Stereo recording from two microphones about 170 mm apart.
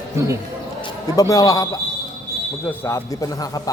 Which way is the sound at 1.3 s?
20° left (ahead or behind).